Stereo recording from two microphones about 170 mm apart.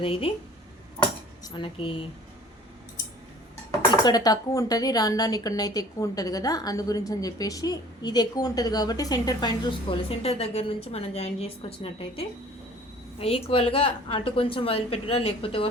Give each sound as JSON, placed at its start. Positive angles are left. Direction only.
{"t": 0.0, "sound": "a woman's voice", "side_deg": 35}
{"t": 1.5, "sound": "a woman's voice", "side_deg": 30}
{"t": 3.7, "sound": "speech", "side_deg": 25}
{"t": 13.1, "sound": "a woman's voice", "side_deg": 35}